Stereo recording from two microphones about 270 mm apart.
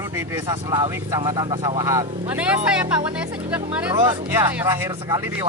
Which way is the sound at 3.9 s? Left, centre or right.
Centre.